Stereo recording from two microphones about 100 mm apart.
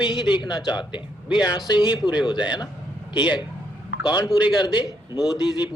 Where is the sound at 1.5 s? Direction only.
45° left (ahead or behind).